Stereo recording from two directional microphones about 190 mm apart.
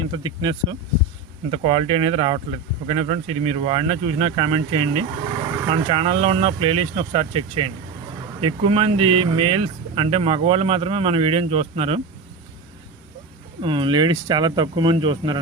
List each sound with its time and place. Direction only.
0.1 s speech: 25° right (ahead or behind)
13.6 s speech: 25° right (ahead or behind)